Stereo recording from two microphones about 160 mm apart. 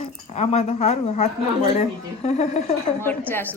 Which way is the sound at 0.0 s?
40° left (ahead or behind).